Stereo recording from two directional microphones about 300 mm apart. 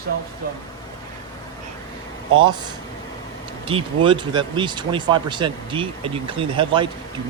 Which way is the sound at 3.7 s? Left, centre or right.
Centre.